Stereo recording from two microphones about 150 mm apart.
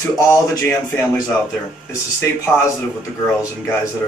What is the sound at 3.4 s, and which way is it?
Speech, 20° left (ahead or behind).